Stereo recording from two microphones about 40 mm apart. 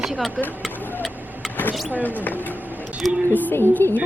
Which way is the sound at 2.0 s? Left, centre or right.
Left.